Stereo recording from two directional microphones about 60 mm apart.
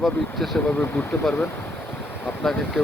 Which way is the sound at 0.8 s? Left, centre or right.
Centre.